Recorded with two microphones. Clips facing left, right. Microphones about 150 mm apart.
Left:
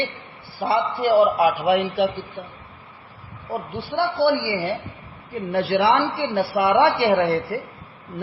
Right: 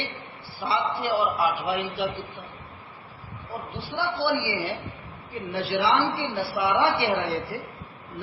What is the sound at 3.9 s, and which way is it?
Speech, 55° left (ahead or behind).